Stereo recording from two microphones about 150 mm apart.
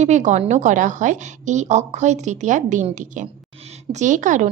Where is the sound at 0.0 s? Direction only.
50° right (ahead or behind).